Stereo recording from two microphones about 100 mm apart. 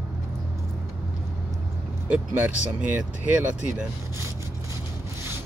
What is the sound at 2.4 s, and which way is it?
Speech, 15° right (ahead or behind).